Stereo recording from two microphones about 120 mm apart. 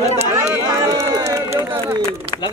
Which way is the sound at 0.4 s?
25° right (ahead or behind).